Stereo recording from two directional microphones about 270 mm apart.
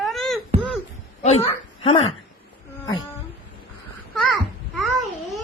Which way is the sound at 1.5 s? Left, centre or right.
Centre.